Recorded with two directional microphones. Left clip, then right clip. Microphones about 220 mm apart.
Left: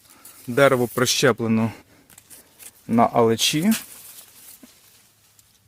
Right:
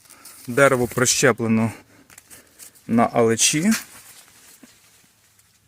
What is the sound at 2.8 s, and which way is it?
Speech, 10° right (ahead or behind).